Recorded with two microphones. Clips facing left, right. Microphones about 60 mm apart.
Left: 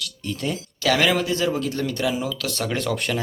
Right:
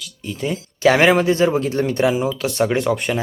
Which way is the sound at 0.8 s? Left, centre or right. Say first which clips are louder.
Right 7 dB; right.